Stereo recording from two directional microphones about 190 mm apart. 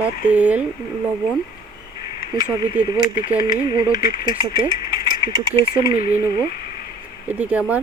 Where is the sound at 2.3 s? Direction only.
20° right (ahead or behind).